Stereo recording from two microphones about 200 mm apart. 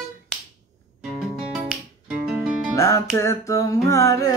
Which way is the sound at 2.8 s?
15° left (ahead or behind).